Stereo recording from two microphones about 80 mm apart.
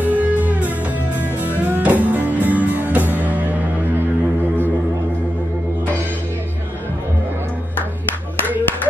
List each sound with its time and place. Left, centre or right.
0.0 s music: right
1.7 s music: centre